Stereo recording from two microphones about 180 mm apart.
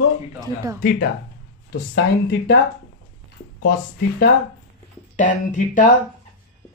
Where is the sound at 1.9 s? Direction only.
70° left (ahead or behind).